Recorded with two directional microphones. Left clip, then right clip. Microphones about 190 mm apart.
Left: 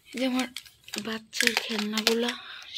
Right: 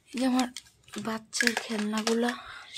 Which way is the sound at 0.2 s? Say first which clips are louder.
Right 1 dB; 5° right (ahead or behind).